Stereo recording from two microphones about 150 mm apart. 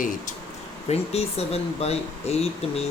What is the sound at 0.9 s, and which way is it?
Speech, 45° left (ahead or behind).